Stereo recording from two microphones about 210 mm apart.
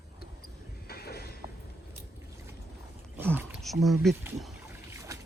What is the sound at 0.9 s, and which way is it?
Mechanisms, 50° left (ahead or behind).